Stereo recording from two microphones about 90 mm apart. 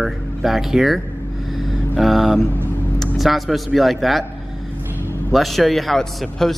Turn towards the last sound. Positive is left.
turn(degrees=5)  # may be behind; listen again after turning